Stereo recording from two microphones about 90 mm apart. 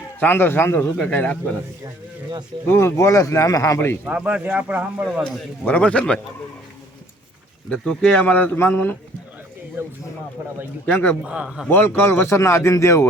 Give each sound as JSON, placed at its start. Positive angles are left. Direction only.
{"t": 0.2, "sound": "speech", "side_deg": 25}
{"t": 0.9, "sound": "speech", "side_deg": 10}
{"t": 2.6, "sound": "a man's voice", "side_deg": 30}
{"t": 4.0, "sound": "speech", "side_deg": -15}
{"t": 5.6, "sound": "speech", "side_deg": 15}
{"t": 7.7, "sound": "speech", "side_deg": 10}
{"t": 9.8, "sound": "speech", "side_deg": -25}
{"t": 10.8, "sound": "speech", "side_deg": 20}
{"t": 11.2, "sound": "speech", "side_deg": -10}
{"t": 11.7, "sound": "a man's voice", "side_deg": 25}